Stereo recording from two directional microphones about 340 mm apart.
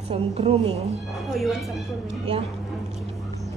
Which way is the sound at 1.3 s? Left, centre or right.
Centre.